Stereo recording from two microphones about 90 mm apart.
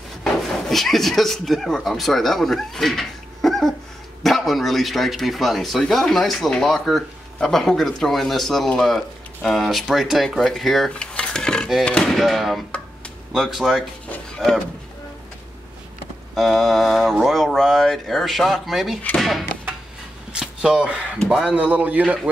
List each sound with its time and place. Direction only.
0.2 s a man's voice: 5° left (ahead or behind)
16.3 s a man's voice: centre (ahead or behind)
20.3 s a sound: 10° right (ahead or behind)
21.3 s a man's voice: 10° right (ahead or behind)